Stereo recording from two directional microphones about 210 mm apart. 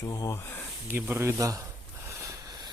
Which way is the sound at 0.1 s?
15° left (ahead or behind).